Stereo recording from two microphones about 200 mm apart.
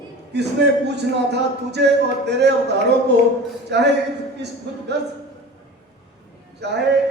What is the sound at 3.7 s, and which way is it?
Speech, 60° right (ahead or behind).